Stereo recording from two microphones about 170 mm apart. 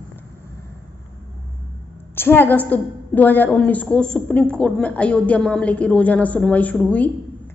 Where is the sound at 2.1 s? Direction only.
15° left (ahead or behind).